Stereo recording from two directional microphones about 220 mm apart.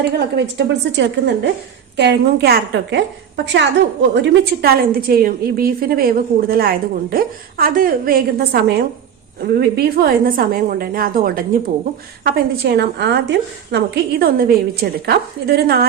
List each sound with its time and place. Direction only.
0.0 s a woman's voice: 50° right (ahead or behind)